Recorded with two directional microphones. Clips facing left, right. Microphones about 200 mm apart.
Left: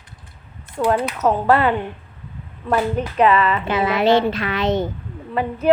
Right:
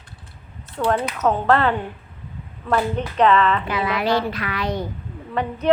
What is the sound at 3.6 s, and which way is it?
A woman's voice, 25° left (ahead or behind).